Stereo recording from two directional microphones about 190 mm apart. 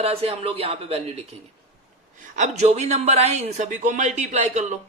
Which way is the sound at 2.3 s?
40° right (ahead or behind).